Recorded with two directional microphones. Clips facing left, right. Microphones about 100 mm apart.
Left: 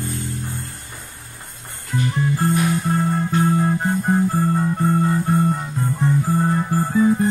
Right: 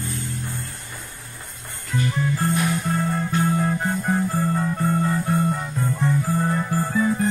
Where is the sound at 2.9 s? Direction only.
25° left (ahead or behind).